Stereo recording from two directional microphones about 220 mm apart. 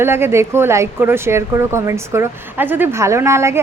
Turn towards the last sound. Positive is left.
turn(degrees=-10)  # may be behind; listen again after turning